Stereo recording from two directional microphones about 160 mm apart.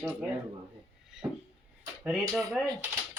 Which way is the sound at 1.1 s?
5° right (ahead or behind).